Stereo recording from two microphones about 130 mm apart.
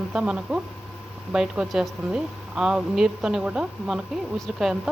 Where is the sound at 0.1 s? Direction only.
5° right (ahead or behind).